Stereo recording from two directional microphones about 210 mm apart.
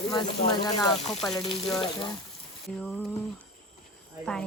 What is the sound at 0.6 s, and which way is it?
Frying, 20° left (ahead or behind).